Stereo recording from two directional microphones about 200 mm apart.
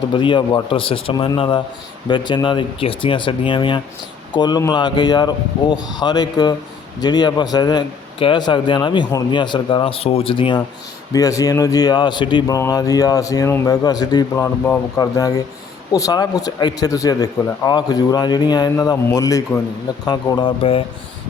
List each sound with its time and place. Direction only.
0.1 s speech: 25° left (ahead or behind)